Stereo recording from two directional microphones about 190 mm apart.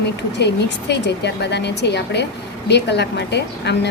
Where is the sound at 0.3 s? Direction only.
65° left (ahead or behind).